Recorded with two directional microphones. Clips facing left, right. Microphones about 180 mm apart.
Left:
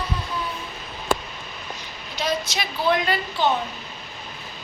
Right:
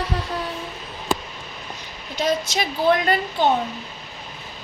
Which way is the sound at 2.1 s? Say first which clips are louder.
Right 4 dB; 45° right (ahead or behind).